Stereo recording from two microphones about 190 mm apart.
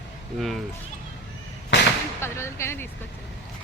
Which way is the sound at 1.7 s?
70° left (ahead or behind).